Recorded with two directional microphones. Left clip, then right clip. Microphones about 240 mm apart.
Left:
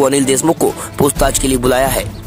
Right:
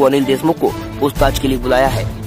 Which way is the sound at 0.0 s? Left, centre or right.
Left.